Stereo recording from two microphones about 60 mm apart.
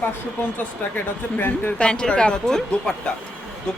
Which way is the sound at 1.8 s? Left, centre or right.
Centre.